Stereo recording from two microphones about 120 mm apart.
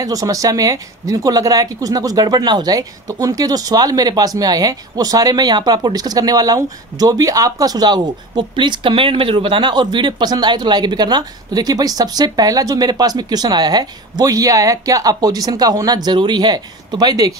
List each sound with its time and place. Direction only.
0.0 s speech: 30° right (ahead or behind)